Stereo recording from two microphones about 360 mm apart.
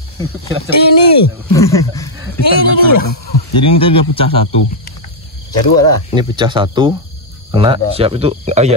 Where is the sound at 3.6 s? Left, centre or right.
Centre.